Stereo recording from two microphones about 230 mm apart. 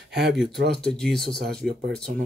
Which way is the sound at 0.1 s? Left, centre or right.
Right.